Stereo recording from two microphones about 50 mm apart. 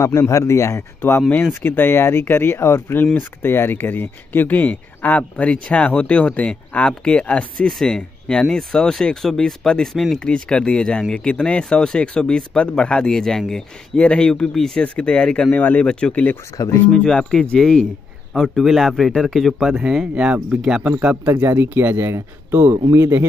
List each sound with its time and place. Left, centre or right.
0.0 s a man's voice: left
1.4 s speech: left
7.6 s speech: centre
10.2 s speech: centre
13.1 s speech: centre
14.8 s speech: left
15.5 s speech: left
15.8 s speech: centre
16.1 s speech: left
16.6 s speech: left
16.9 s a man's voice: centre
20.4 s speech: centre
21.0 s a man's voice: right
21.3 s speech: right